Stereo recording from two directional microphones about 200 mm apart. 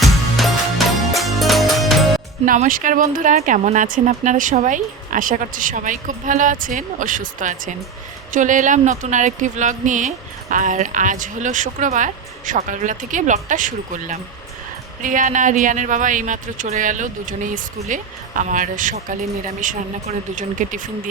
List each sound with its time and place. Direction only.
0.0 s music: centre (ahead or behind)
2.5 s speech: 40° right (ahead or behind)